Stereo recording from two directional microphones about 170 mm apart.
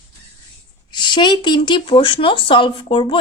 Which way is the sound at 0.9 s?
25° left (ahead or behind).